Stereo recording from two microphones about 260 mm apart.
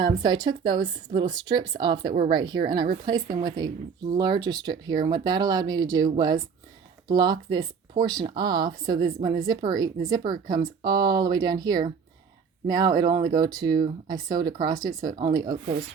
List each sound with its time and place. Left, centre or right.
0.0 s speech: centre